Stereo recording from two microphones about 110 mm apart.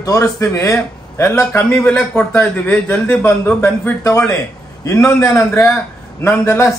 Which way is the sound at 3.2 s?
25° left (ahead or behind).